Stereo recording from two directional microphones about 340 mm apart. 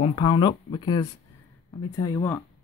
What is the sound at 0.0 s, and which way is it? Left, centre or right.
Speech, centre.